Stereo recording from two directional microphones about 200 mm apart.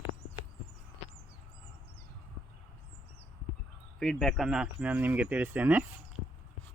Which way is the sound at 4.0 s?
Centre (ahead or behind).